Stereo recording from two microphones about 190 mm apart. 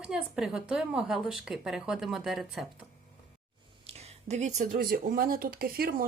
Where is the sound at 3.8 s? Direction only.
35° right (ahead or behind).